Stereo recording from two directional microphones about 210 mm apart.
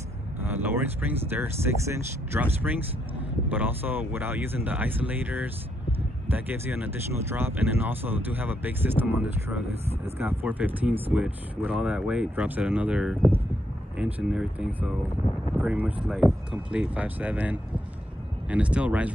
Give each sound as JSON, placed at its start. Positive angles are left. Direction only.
{"t": 0.4, "sound": "speech", "side_deg": -10}